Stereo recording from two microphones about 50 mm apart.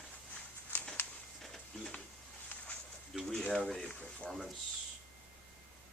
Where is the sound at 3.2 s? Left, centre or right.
Centre.